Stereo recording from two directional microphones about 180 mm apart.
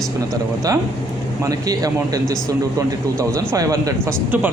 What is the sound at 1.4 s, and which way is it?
Speech, 20° right (ahead or behind).